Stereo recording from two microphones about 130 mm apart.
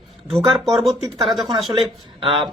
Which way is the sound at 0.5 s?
Centre (ahead or behind).